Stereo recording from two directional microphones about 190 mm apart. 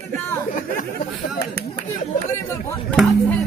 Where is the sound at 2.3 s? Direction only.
15° left (ahead or behind).